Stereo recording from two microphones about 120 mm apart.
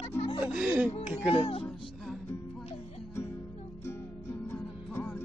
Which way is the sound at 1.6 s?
Centre (ahead or behind).